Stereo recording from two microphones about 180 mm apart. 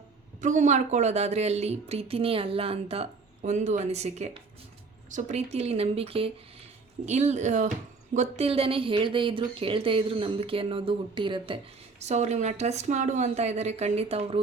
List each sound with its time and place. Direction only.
0.4 s speech: 45° right (ahead or behind)